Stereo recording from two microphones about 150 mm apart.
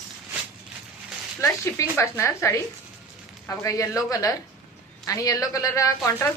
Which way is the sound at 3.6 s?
20° left (ahead or behind).